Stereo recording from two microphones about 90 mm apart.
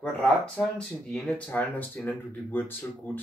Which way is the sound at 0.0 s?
10° left (ahead or behind).